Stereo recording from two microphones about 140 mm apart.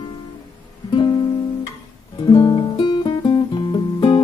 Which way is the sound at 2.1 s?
30° left (ahead or behind).